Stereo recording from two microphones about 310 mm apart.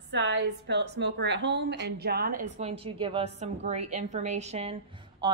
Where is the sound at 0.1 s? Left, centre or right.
Right.